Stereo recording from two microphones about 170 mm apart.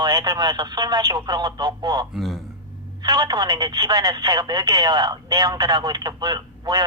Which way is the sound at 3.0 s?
25° right (ahead or behind).